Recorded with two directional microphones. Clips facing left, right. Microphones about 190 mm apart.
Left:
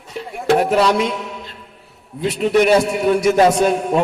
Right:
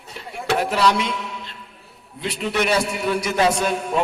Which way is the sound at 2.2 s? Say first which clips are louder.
Left 8 dB; 45° left (ahead or behind).